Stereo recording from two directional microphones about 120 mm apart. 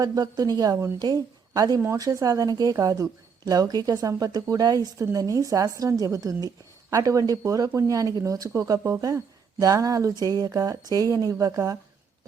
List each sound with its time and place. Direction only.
0.0 s a woman's voice: 30° right (ahead or behind)